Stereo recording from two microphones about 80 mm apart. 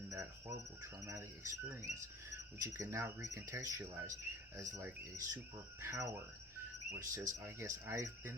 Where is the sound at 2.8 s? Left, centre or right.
Right.